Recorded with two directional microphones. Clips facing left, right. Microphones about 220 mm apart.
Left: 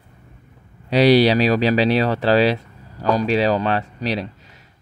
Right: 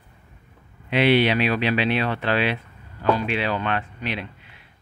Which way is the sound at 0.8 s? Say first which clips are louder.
Left 5 dB; 40° left (ahead or behind).